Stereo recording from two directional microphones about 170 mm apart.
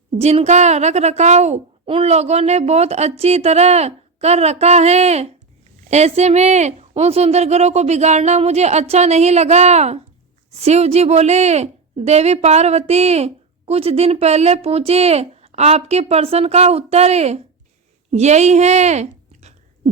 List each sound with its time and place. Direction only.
0.2 s a woman's voice: 40° right (ahead or behind)